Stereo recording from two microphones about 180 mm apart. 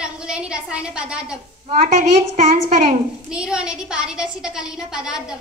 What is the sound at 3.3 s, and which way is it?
A woman's voice, 5° right (ahead or behind).